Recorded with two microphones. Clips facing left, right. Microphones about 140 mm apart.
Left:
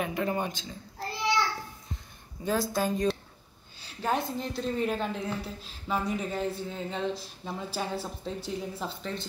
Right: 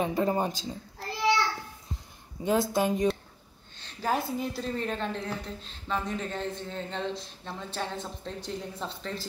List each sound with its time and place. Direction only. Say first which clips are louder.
0.0 s speech: right 3 dB; 30° right (ahead or behind)
2.4 s a woman's voice: right 3 dB; 25° right (ahead or behind)
3.7 s a woman's voice: even; 5° left (ahead or behind)